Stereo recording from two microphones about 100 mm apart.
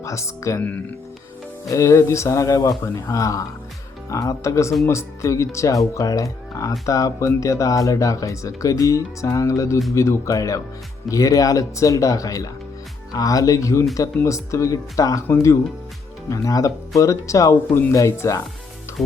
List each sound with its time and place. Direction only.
0.0 s speech: 30° left (ahead or behind)
1.7 s speech: 30° left (ahead or behind)
19.0 s music: 5° left (ahead or behind)